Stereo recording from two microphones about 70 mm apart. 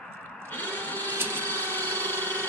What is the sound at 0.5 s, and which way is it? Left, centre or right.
Music, left.